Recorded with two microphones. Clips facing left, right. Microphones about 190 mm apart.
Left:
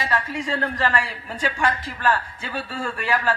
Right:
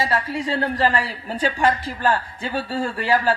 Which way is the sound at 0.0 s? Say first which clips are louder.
Right 3 dB; 30° right (ahead or behind).